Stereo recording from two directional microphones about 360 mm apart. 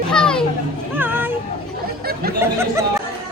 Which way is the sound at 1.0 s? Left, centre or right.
Centre.